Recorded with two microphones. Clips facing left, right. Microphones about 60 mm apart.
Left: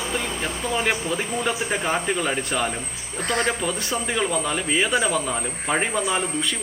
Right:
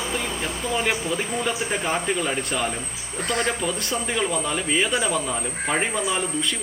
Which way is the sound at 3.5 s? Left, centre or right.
Centre.